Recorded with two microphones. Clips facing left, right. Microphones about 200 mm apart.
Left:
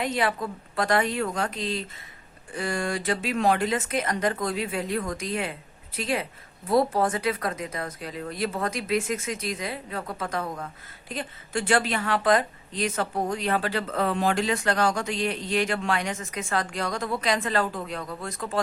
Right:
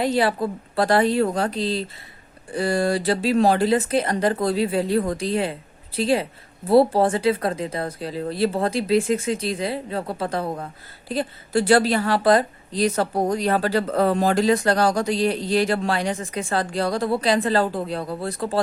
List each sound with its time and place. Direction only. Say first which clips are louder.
0.0 s a woman's voice: right 6 dB; 35° right (ahead or behind)